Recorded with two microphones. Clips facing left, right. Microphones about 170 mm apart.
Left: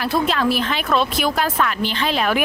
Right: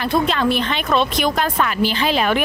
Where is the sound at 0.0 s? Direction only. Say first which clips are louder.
Right 1 dB; centre (ahead or behind).